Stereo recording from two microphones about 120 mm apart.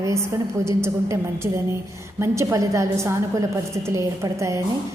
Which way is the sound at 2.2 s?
25° right (ahead or behind).